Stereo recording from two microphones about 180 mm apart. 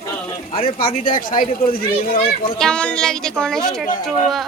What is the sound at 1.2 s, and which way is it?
Speech, 50° left (ahead or behind).